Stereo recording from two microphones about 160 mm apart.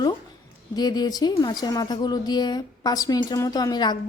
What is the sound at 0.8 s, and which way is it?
Speech, 25° left (ahead or behind).